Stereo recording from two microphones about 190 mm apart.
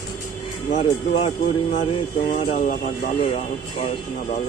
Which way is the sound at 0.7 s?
35° left (ahead or behind).